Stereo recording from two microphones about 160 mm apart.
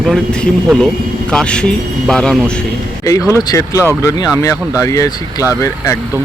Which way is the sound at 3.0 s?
20° left (ahead or behind).